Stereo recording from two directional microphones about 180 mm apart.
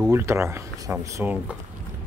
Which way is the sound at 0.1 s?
15° right (ahead or behind).